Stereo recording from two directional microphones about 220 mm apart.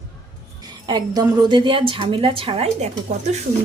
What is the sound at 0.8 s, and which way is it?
A woman's voice, 20° right (ahead or behind).